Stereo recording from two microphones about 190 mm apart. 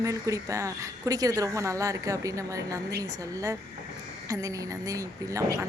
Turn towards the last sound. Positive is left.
turn(degrees=-15)  # may be behind; listen again after turning